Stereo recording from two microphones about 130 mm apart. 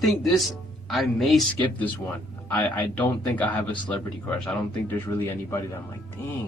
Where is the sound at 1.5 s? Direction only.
10° left (ahead or behind).